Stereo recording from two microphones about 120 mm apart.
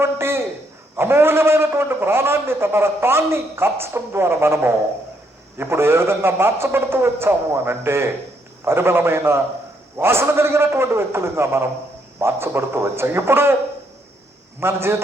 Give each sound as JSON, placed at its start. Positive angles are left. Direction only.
{"t": 0.0, "sound": "a sound", "side_deg": -20}
{"t": 0.9, "sound": "a man's voice", "side_deg": -20}
{"t": 14.6, "sound": "a man's voice", "side_deg": -20}